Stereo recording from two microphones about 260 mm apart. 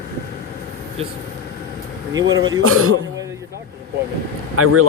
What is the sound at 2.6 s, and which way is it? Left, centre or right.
Speech, right.